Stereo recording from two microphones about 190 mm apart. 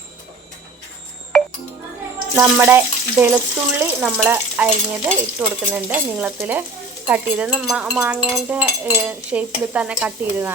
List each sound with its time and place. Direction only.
1.3 s music: centre (ahead or behind)
2.3 s speech: 10° right (ahead or behind)